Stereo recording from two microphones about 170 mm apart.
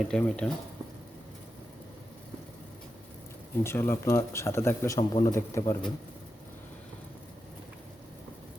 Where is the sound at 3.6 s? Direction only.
15° left (ahead or behind).